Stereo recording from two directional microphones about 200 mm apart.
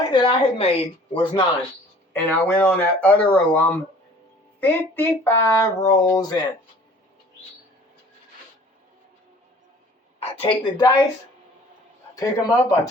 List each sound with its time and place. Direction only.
0.1 s speech: 25° left (ahead or behind)
2.1 s speech: 10° left (ahead or behind)
10.2 s a woman's voice: 30° left (ahead or behind)
12.1 s speech: 15° left (ahead or behind)